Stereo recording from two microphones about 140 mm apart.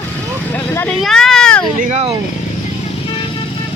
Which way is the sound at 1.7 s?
65° right (ahead or behind).